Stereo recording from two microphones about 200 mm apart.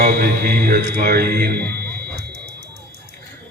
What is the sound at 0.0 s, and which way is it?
Speech, 50° right (ahead or behind).